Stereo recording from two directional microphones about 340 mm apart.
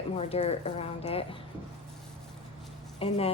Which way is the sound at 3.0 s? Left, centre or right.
Centre.